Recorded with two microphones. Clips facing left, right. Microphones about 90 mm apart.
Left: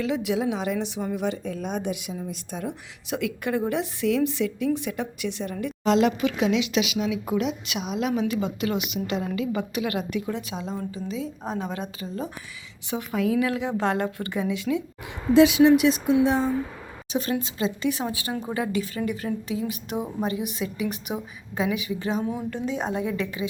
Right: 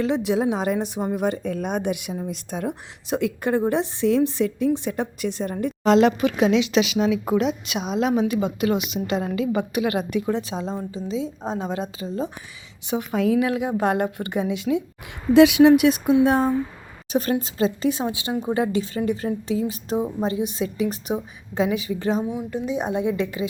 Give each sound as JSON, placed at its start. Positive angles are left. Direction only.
{"t": 0.0, "sound": "a woman's voice", "side_deg": -35}
{"t": 3.1, "sound": "a woman's voice", "side_deg": -35}
{"t": 7.4, "sound": "a woman's voice", "side_deg": -25}
{"t": 15.3, "sound": "a woman's voice", "side_deg": -65}
{"t": 17.9, "sound": "a woman's voice", "side_deg": -20}
{"t": 22.2, "sound": "a woman's voice", "side_deg": -15}